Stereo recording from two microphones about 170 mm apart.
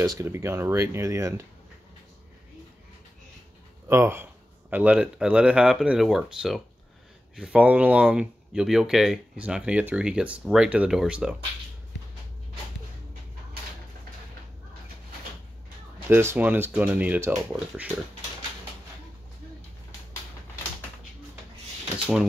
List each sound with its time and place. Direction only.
0.0 s speech: 20° right (ahead or behind)
3.8 s speech: 15° right (ahead or behind)
16.1 s speech: 15° right (ahead or behind)
21.9 s drawer open or close: 5° right (ahead or behind)